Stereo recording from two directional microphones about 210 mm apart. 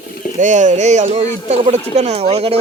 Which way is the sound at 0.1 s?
40° left (ahead or behind).